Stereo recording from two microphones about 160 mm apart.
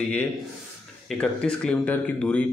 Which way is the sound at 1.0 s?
5° left (ahead or behind).